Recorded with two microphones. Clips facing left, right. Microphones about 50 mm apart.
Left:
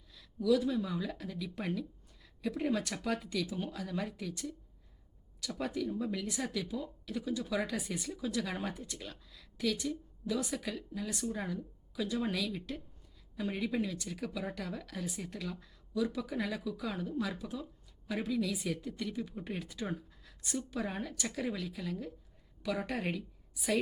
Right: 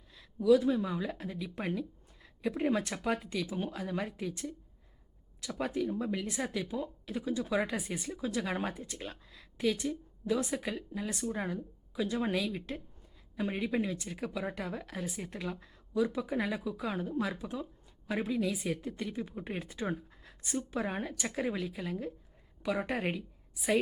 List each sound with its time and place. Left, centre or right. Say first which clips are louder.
0.1 s a woman's voice: right 4 dB; right